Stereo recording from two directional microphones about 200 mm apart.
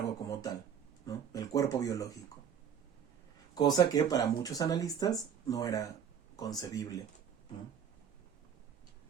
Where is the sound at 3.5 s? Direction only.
20° left (ahead or behind).